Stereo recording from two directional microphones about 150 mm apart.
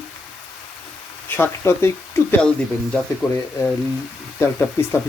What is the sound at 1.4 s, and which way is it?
Speech, 15° left (ahead or behind).